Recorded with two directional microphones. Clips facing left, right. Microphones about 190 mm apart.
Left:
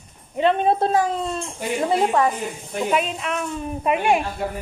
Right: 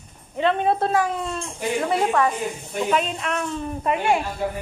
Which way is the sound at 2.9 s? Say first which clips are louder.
Left 1 dB; 5° left (ahead or behind).